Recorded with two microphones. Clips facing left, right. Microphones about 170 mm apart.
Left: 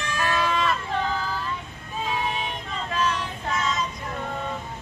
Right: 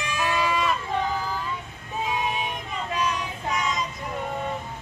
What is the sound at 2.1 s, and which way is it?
Child singing, 15° right (ahead or behind).